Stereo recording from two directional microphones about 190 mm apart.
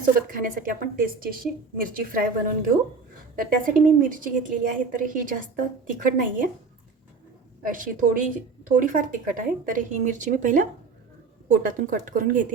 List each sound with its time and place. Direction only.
0.0 s a woman's voice: 45° right (ahead or behind)
7.6 s a woman's voice: 45° right (ahead or behind)